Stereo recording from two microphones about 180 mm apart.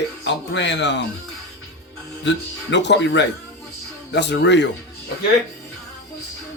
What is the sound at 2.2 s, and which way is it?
Speech, 80° left.